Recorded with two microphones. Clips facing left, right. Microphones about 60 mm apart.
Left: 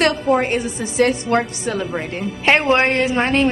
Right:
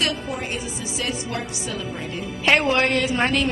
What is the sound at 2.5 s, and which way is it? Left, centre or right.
Speech, left.